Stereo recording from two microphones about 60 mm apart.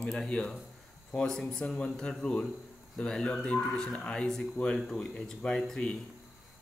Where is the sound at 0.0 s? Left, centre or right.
Centre.